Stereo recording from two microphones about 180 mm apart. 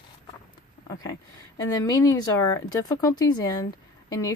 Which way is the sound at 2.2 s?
20° left (ahead or behind).